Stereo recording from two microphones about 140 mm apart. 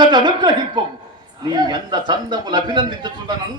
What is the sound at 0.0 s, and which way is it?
Speech, 30° right (ahead or behind).